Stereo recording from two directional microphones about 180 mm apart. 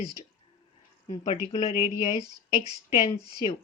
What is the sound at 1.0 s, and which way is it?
Speech, 40° left (ahead or behind).